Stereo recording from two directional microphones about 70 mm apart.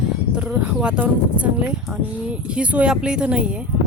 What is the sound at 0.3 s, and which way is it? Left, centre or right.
Speech, centre.